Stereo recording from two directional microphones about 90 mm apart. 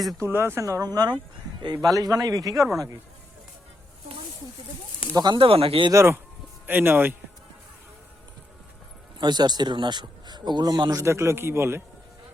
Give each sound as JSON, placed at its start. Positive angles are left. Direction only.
{"t": 0.3, "sound": "speech", "side_deg": -30}
{"t": 5.1, "sound": "speech", "side_deg": -50}
{"t": 5.4, "sound": "speech", "side_deg": -90}
{"t": 5.9, "sound": "speech", "side_deg": -35}
{"t": 6.7, "sound": "a man's voice", "side_deg": -20}
{"t": 9.1, "sound": "speech", "side_deg": -55}
{"t": 11.0, "sound": "a man's voice", "side_deg": -30}